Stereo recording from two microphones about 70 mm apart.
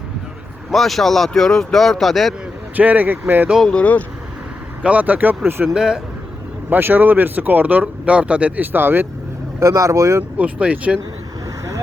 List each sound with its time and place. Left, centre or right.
0.7 s speech: centre
2.7 s speech: right
3.6 s speech: centre
4.8 s speech: right
5.6 s speech: centre
6.7 s speech: right
9.6 s speech: right
10.3 s speech: centre